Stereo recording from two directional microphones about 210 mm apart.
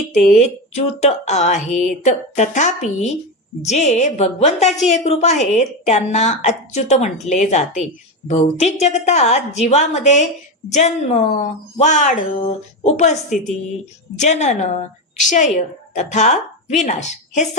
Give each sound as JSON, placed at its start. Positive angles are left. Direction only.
{"t": 0.1, "sound": "a woman's voice", "side_deg": 35}
{"t": 14.2, "sound": "a woman's voice", "side_deg": 35}